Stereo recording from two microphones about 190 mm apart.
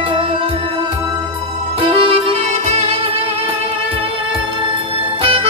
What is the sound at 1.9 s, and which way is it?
Music, 30° right (ahead or behind).